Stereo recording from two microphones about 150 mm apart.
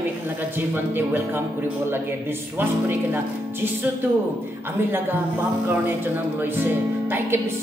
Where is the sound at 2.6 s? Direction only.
15° right (ahead or behind).